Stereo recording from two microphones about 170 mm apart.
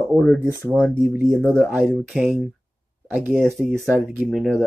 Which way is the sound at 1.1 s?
15° right (ahead or behind).